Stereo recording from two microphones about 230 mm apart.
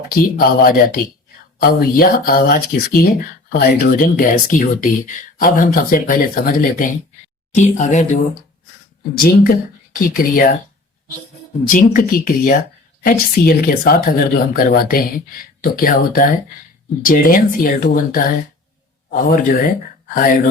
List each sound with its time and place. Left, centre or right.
0.1 s speech: left
11.7 s speech: left